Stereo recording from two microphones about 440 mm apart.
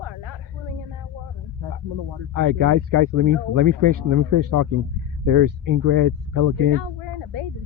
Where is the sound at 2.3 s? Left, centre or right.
Right.